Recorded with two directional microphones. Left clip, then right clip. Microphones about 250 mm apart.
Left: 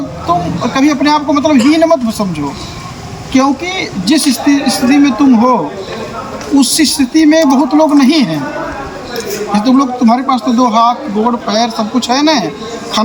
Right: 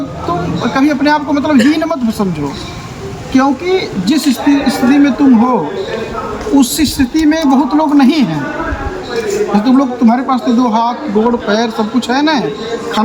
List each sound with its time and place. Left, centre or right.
0.3 s a man's voice: centre
3.3 s a man's voice: centre
6.6 s a man's voice: centre
9.5 s a man's voice: centre